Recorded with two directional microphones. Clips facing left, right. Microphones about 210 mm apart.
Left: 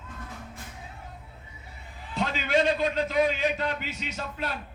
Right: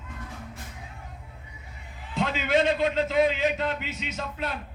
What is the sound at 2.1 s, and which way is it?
A man's voice, 20° right (ahead or behind).